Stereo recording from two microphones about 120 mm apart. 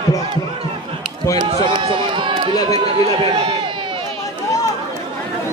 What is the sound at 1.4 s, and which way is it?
Speech, 45° right (ahead or behind).